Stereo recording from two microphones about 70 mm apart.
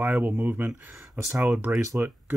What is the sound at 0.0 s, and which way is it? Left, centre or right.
Speech, right.